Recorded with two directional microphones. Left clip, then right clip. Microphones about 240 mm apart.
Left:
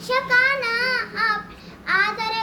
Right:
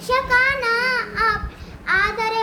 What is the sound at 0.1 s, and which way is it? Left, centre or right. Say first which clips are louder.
Child singing: right 1 dB; centre.